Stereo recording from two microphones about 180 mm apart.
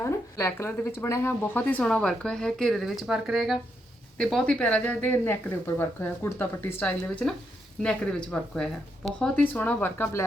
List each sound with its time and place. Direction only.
0.0 s a woman's voice: 15° left (ahead or behind)